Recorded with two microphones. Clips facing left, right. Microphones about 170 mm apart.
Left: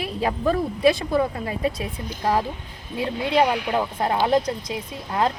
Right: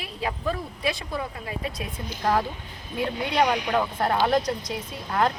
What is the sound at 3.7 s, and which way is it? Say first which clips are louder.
Speech: left 1 dB; 20° left (ahead or behind).